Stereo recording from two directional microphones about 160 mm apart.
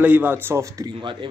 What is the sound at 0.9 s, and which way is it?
Speech, 30° right (ahead or behind).